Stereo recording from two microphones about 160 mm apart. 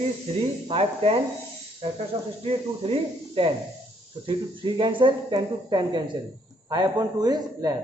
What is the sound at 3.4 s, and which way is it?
Speech, 35° right (ahead or behind).